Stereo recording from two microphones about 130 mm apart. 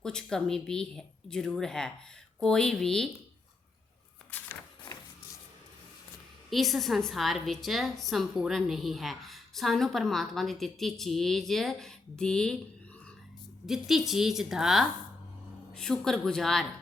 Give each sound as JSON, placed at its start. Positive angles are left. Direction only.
{"t": 0.0, "sound": "a woman's voice", "side_deg": 5}
{"t": 4.3, "sound": "a sound", "side_deg": 10}
{"t": 6.5, "sound": "a woman's voice", "side_deg": 0}
{"t": 13.7, "sound": "a woman's voice", "side_deg": 0}